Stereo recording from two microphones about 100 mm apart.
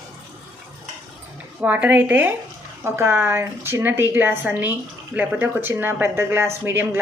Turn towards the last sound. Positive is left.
turn(degrees=-20)  # may be behind; listen again after turning